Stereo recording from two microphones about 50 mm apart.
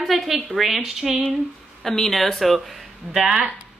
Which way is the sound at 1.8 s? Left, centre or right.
Centre.